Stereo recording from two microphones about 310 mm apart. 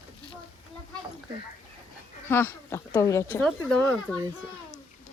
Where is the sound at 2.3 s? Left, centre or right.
Centre.